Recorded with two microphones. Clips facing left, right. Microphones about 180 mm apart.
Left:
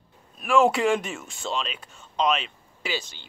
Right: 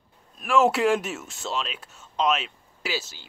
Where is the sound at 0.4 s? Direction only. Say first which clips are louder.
Even; centre (ahead or behind).